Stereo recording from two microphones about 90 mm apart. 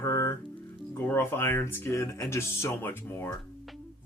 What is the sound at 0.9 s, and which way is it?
A man's voice, 25° left (ahead or behind).